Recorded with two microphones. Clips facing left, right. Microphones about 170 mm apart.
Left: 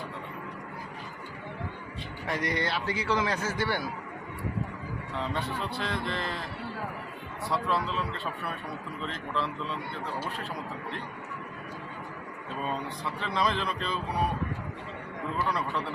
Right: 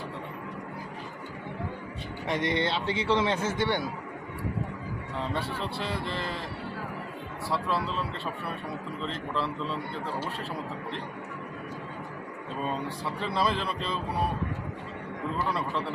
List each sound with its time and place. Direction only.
2.2 s a man's voice: 20° right (ahead or behind)
5.3 s a man's voice: 30° right (ahead or behind)
5.8 s speech: 5° right (ahead or behind)
7.5 s speech: centre (ahead or behind)
9.3 s speech: 5° right (ahead or behind)
12.6 s speech: 5° right (ahead or behind)